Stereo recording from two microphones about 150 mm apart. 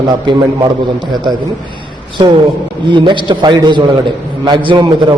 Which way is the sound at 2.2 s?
30° right (ahead or behind).